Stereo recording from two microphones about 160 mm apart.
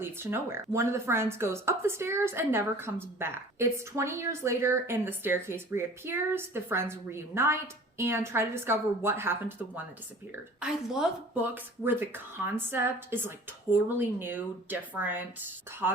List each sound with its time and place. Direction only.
0.0 s a woman's voice: 15° right (ahead or behind)